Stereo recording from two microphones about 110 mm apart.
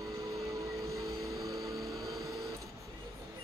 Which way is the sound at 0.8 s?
30° right (ahead or behind).